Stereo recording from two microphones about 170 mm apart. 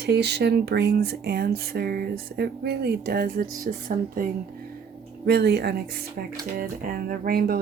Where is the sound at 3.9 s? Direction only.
55° right (ahead or behind).